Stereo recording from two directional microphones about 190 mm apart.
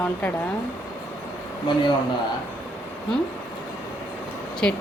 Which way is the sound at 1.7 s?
25° left (ahead or behind).